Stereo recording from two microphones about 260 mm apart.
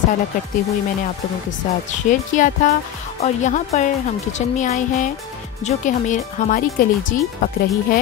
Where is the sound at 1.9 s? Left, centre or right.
Left.